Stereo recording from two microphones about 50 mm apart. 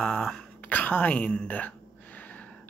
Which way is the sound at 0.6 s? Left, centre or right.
Left.